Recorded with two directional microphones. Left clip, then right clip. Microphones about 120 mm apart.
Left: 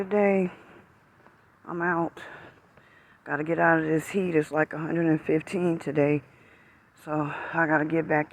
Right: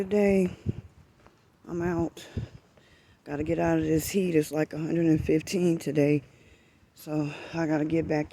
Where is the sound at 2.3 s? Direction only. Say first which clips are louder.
Even; 90° right.